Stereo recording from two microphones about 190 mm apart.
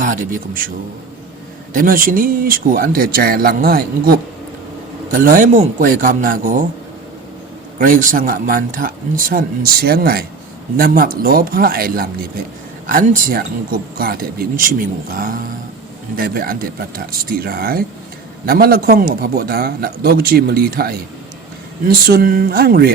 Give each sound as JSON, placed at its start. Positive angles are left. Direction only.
{"t": 0.0, "sound": "a man's voice", "side_deg": -45}
{"t": 1.7, "sound": "a man's voice", "side_deg": -45}
{"t": 7.8, "sound": "a man's voice", "side_deg": -45}